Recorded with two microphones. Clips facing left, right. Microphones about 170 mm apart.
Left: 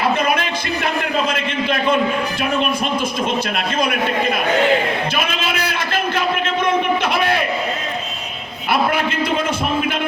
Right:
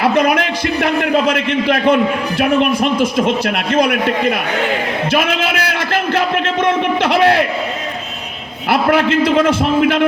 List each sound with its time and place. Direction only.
0.0 s a man's voice: 75° right (ahead or behind)
5.1 s a sound: 80° right
8.7 s a man's voice: 90° right